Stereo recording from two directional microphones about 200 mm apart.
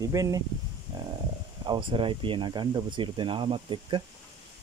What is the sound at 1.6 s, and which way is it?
Speech, 25° right (ahead or behind).